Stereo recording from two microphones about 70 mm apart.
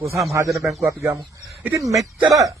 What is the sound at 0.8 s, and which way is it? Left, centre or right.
Speech, right.